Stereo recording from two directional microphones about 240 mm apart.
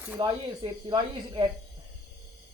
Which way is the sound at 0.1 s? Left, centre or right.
Centre.